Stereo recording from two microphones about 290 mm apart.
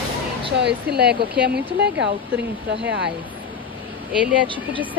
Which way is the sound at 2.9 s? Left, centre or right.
Right.